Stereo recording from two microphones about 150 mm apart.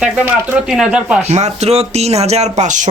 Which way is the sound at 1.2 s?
50° right (ahead or behind).